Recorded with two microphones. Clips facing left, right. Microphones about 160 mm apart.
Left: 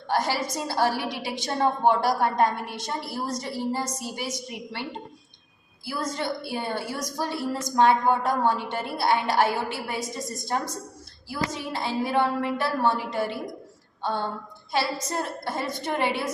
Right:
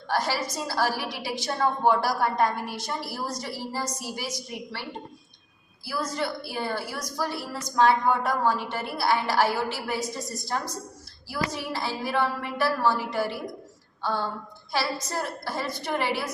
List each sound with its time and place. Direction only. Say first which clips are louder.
0.1 s a woman's voice: left 2 dB; 20° left (ahead or behind)
14.0 s a sound: even; 20° left (ahead or behind)
14.7 s a woman's voice: left 2 dB; 20° left (ahead or behind)